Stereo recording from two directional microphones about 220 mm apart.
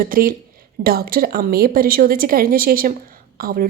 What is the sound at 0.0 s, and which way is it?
A woman's voice, 40° right (ahead or behind).